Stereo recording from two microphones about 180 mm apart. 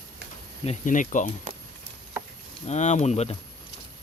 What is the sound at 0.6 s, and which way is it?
Speech, 45° left (ahead or behind).